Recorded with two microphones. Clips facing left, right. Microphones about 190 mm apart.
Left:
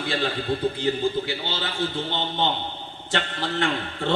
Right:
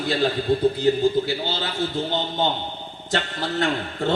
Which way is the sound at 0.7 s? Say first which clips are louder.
Right 5 dB; 40° right (ahead or behind).